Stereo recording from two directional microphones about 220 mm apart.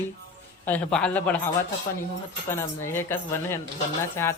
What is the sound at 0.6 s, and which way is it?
Speech, 5° left (ahead or behind).